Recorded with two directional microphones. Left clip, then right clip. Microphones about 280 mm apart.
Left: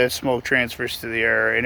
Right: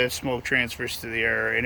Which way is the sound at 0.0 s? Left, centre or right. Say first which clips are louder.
Left 5 dB; centre.